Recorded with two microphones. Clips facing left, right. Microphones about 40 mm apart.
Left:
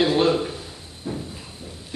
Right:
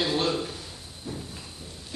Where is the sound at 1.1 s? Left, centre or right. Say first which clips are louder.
Left 7 dB; left.